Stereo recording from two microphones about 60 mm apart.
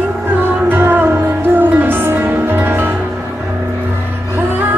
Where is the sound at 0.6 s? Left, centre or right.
Right.